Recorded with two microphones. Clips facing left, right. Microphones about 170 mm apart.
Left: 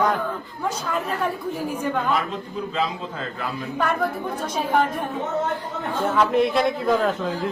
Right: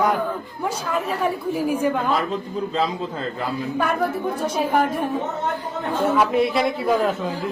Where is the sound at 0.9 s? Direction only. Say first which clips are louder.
Right 3 dB; 5° right (ahead or behind).